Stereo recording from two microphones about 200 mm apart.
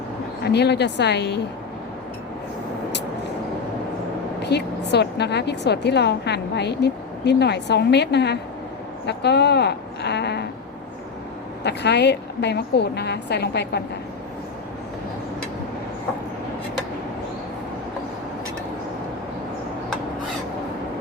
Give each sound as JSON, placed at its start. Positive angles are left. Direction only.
{"t": 0.4, "sound": "a woman's voice", "side_deg": 55}
{"t": 4.4, "sound": "a woman's voice", "side_deg": 55}
{"t": 11.6, "sound": "a woman's voice", "side_deg": 60}